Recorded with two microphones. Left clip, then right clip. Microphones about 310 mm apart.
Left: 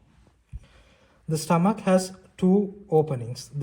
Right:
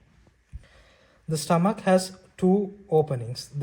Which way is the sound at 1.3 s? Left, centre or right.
Right.